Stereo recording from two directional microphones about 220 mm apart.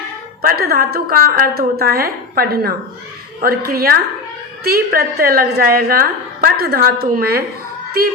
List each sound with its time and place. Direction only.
0.4 s a woman's voice: 45° right (ahead or behind)